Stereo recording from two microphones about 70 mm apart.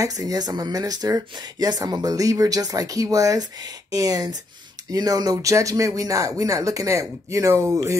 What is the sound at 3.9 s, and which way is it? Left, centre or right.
Speech, right.